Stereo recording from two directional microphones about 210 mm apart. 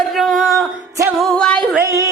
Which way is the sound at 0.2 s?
Centre (ahead or behind).